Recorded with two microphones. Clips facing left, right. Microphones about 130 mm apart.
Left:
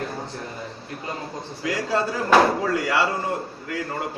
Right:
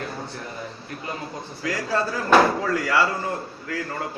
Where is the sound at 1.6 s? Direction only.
20° left (ahead or behind).